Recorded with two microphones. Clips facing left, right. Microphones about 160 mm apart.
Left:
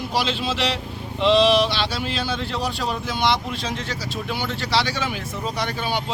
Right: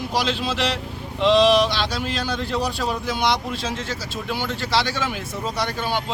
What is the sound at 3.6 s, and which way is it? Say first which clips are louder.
Speech: right 1 dB; 15° left (ahead or behind).